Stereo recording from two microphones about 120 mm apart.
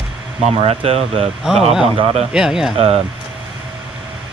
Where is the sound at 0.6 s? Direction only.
55° right (ahead or behind).